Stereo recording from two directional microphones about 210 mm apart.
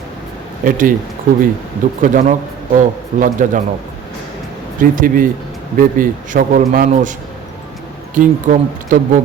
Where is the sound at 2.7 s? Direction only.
40° right (ahead or behind).